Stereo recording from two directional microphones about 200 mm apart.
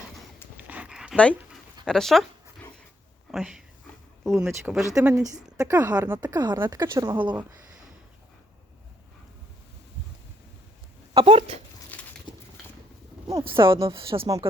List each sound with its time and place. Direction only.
0.5 s dog: 5° right (ahead or behind)
1.1 s speech: 5° left (ahead or behind)
3.3 s speech: 5° right (ahead or behind)
4.8 s speech: 15° right (ahead or behind)
6.2 s speech: 20° right (ahead or behind)
11.1 s speech: 25° right (ahead or behind)
11.9 s pigeon: 10° left (ahead or behind)
13.3 s speech: 25° right (ahead or behind)